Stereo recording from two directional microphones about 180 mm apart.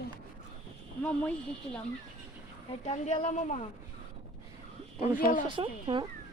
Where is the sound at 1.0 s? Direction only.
10° left (ahead or behind).